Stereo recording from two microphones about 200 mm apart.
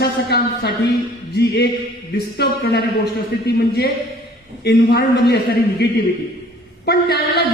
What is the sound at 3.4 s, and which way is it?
A woman's voice, 50° left (ahead or behind).